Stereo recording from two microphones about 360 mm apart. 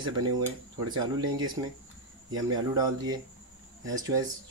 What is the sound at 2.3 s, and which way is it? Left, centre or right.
Speech, centre.